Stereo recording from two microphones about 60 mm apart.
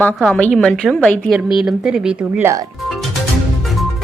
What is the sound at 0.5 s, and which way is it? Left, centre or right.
Speech, centre.